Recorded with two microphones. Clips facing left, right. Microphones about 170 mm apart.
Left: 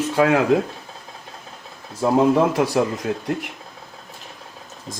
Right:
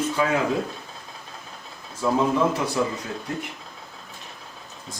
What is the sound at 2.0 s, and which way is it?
Speech, 60° left (ahead or behind).